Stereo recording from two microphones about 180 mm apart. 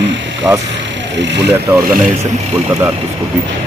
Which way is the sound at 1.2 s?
75° right (ahead or behind).